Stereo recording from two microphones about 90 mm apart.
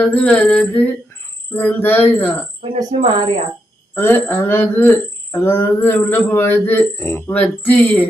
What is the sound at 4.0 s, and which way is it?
Speech, 25° left (ahead or behind).